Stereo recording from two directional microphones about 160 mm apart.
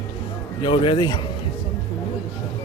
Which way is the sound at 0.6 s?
35° left (ahead or behind).